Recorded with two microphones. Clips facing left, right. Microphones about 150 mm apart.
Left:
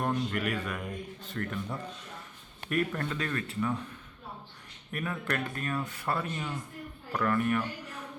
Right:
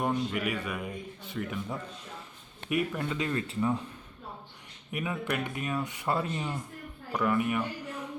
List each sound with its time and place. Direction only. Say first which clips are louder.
0.0 s a man's voice: right 1 dB; 5° right (ahead or behind)
3.2 s speech: right 2 dB; 20° right (ahead or behind)
4.9 s a man's voice: right 1 dB; 15° right (ahead or behind)
7.1 s a man's voice: even; 10° right (ahead or behind)